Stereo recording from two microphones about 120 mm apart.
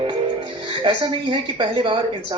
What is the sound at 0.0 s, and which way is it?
Speech, 45° right (ahead or behind).